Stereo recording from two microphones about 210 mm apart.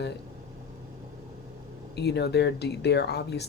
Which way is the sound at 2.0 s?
55° left (ahead or behind).